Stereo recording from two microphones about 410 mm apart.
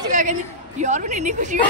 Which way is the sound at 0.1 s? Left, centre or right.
Centre.